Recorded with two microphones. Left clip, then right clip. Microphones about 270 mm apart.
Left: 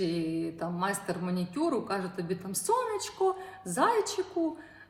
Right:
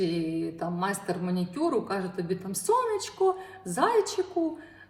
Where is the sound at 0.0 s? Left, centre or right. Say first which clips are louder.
Right 2 dB; centre.